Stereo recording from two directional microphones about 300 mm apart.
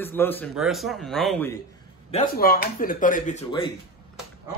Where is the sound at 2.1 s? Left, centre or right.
Left.